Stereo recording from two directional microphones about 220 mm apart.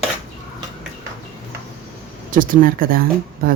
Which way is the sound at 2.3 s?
40° right (ahead or behind).